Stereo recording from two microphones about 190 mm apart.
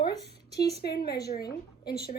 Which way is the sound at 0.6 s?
55° left (ahead or behind).